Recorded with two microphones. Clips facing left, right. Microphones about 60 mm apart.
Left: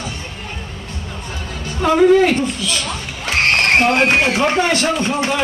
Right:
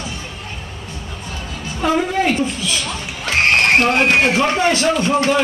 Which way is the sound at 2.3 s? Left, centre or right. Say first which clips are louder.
Left 1 dB; left.